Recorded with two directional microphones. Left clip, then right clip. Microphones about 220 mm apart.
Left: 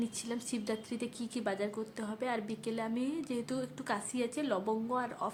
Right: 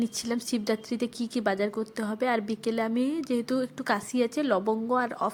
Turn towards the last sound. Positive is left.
turn(degrees=-30)  # may be behind; listen again after turning